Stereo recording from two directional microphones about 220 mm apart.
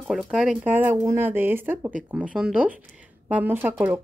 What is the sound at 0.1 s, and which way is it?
A woman's voice, centre (ahead or behind).